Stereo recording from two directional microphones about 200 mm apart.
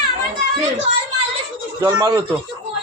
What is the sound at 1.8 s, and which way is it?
Speech, 20° right (ahead or behind).